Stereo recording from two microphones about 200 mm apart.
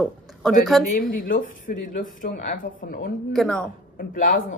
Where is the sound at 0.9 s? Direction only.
45° left (ahead or behind).